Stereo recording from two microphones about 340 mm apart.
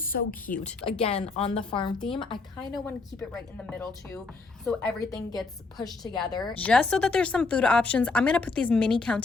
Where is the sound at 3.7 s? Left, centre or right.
Centre.